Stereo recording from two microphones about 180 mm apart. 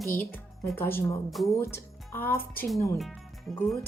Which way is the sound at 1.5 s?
15° left (ahead or behind).